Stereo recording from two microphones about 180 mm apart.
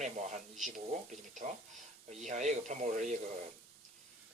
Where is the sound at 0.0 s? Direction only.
40° right (ahead or behind).